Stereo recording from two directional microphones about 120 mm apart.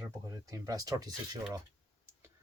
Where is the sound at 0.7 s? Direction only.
30° right (ahead or behind).